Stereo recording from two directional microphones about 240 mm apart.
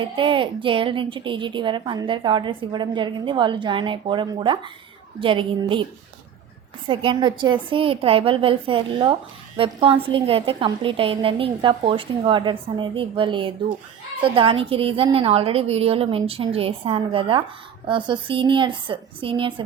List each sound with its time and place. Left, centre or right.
0.0 s a woman's voice: right
6.8 s a woman's voice: centre